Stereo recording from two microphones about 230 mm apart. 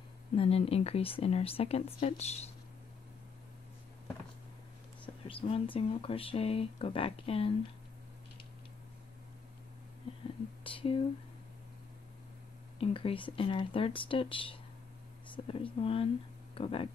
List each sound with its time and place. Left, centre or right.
0.4 s speech: left
5.2 s speech: left
10.2 s speech: left
12.7 s speech: left